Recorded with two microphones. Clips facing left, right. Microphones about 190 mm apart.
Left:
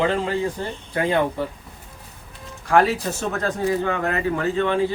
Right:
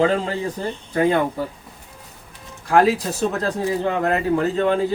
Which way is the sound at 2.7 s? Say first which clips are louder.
Right 2 dB; 35° right (ahead or behind).